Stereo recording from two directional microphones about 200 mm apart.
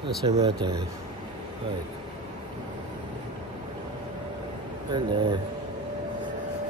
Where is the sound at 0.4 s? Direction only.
20° right (ahead or behind).